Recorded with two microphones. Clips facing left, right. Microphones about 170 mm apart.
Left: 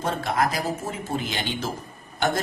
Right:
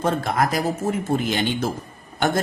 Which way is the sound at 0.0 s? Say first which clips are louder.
Right 3 dB; 50° right (ahead or behind).